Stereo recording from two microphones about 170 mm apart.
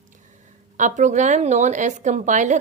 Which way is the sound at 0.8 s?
45° right (ahead or behind).